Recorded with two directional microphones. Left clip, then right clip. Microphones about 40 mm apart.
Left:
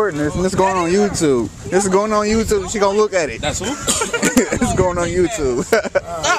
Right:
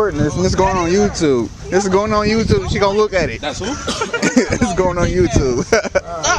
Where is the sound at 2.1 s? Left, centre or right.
Left.